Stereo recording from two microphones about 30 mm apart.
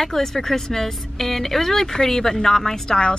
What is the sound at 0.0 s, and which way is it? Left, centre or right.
Speech, centre.